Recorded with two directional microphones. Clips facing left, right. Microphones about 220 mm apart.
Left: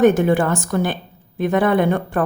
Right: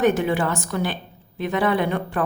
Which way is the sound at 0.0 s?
50° left (ahead or behind).